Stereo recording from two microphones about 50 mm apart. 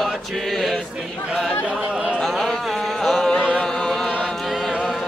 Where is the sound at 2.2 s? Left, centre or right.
Centre.